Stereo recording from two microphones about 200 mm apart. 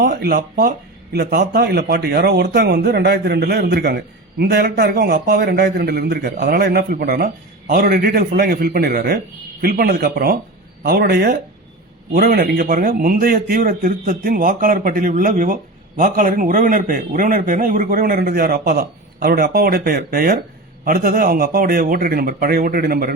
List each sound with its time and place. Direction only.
0.0 s speech: 55° right (ahead or behind)